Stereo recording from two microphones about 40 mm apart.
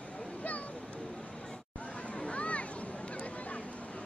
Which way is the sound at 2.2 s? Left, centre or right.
Left.